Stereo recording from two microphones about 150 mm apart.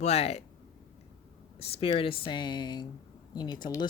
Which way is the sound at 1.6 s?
40° left (ahead or behind).